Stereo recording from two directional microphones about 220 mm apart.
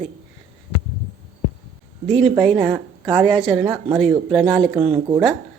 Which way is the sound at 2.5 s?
Centre (ahead or behind).